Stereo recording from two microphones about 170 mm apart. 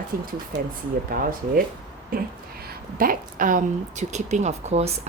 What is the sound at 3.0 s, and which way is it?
A woman's voice, 55° right (ahead or behind).